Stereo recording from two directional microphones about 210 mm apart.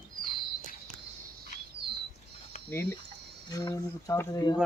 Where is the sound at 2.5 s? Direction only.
35° left (ahead or behind).